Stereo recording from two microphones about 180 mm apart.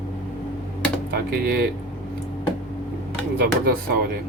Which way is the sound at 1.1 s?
60° right (ahead or behind).